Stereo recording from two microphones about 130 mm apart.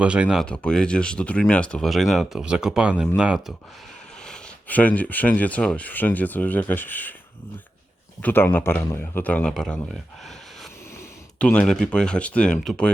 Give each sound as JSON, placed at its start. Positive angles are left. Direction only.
{"t": 0.0, "sound": "speech", "side_deg": -10}
{"t": 0.4, "sound": "speech", "side_deg": 5}
{"t": 4.3, "sound": "speech", "side_deg": 10}
{"t": 8.2, "sound": "speech", "side_deg": 15}
{"t": 9.9, "sound": "a sound", "side_deg": 0}
{"t": 11.3, "sound": "speech", "side_deg": 10}